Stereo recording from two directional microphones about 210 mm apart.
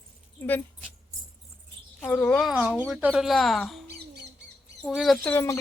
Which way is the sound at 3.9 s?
50° right (ahead or behind).